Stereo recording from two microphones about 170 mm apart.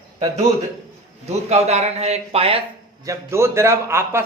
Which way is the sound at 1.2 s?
40° right (ahead or behind).